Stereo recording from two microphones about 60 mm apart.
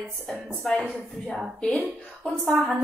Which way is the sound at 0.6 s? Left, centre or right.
Centre.